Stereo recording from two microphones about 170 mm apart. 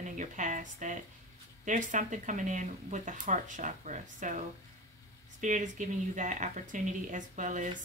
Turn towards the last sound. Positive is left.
turn(degrees=-45)  # may be behind; listen again after turning